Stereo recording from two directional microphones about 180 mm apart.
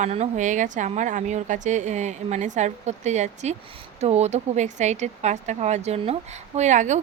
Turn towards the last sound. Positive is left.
turn(degrees=-40)  # may be behind; listen again after turning